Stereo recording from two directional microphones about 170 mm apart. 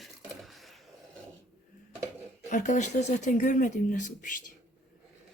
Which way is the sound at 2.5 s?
45° left (ahead or behind).